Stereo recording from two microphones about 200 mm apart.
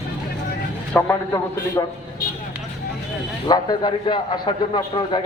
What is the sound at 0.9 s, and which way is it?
Speech, 15° left (ahead or behind).